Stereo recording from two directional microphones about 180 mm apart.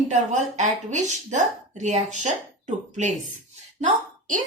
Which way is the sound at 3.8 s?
45° right (ahead or behind).